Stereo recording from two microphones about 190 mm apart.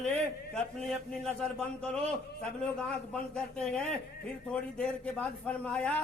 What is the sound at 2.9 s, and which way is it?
A man's voice, 5° left (ahead or behind).